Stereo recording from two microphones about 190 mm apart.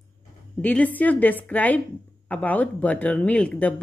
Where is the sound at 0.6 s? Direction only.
5° left (ahead or behind).